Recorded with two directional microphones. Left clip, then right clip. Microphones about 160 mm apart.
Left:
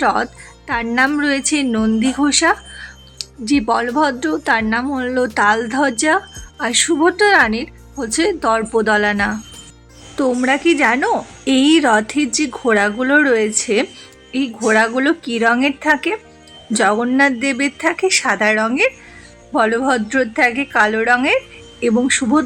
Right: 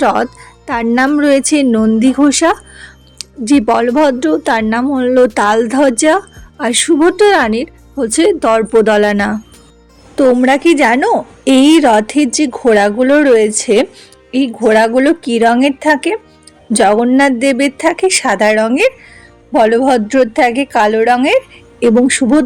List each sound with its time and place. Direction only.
0.0 s a woman's voice: 30° right (ahead or behind)